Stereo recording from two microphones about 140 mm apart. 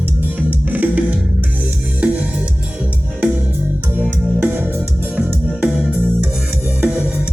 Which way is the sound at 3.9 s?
15° right (ahead or behind).